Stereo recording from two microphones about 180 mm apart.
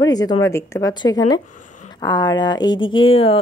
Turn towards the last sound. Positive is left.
turn(degrees=30)  # may be behind; listen again after turning